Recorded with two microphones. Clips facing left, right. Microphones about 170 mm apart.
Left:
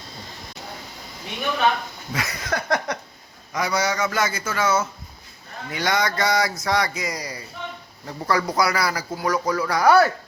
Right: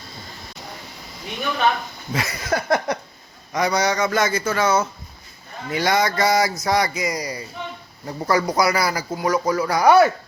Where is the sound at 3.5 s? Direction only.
40° right (ahead or behind); by 10.1 s 20° right (ahead or behind).